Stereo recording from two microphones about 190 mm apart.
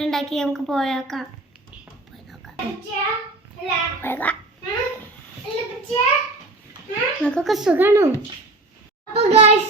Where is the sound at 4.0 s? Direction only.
10° left (ahead or behind).